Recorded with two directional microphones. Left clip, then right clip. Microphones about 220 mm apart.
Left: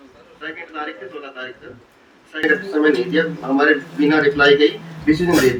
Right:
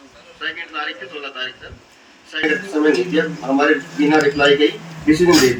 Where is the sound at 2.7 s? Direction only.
45° right (ahead or behind).